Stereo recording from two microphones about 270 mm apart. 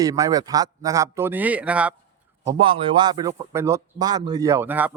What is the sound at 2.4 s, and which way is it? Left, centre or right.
A man's voice, centre.